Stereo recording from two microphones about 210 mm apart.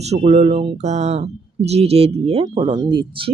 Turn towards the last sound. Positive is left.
turn(degrees=-25)  # may be behind; listen again after turning